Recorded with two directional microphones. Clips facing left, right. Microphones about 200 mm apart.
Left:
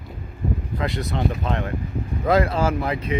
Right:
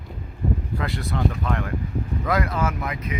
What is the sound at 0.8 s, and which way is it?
Speech, 20° left (ahead or behind).